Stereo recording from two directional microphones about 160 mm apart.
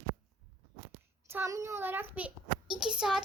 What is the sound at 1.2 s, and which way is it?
A child's voice, 15° right (ahead or behind).